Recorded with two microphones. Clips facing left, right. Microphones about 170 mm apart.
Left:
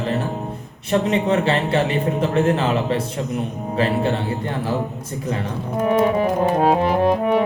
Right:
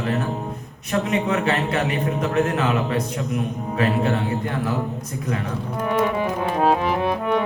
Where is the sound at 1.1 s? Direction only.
30° left (ahead or behind).